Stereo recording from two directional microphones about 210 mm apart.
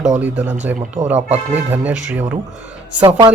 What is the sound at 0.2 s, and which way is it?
Speech, 5° right (ahead or behind).